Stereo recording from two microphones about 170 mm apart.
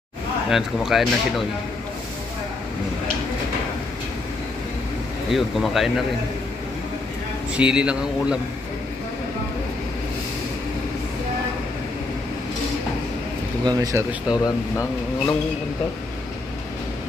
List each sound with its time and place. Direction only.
0.5 s speech: centre (ahead or behind)
5.3 s speech: centre (ahead or behind)
7.5 s speech: 5° right (ahead or behind)
13.7 s speech: 20° right (ahead or behind)
14.3 s speech: 25° left (ahead or behind)